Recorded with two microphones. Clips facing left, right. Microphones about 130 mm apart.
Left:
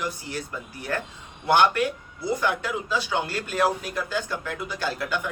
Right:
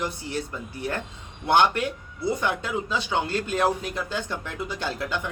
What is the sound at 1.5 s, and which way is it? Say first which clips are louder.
A man's voice: left 1 dB; 25° right (ahead or behind).